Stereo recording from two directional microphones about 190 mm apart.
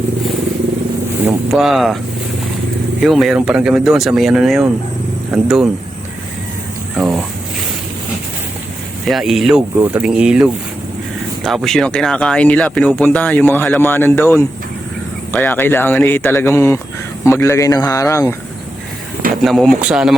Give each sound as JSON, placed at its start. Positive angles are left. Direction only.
{"t": 1.2, "sound": "speech", "side_deg": -5}
{"t": 3.0, "sound": "speech", "side_deg": 0}
{"t": 6.9, "sound": "speech", "side_deg": -5}
{"t": 9.0, "sound": "speech", "side_deg": 0}
{"t": 19.3, "sound": "speech", "side_deg": 0}